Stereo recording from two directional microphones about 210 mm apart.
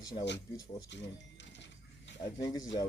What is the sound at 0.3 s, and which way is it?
Speech, 55° left (ahead or behind).